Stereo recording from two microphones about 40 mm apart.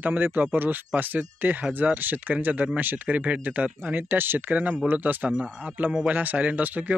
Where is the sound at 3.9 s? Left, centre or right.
Right.